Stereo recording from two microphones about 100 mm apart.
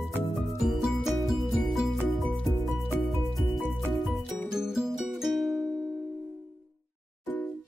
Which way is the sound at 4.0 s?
5° right (ahead or behind).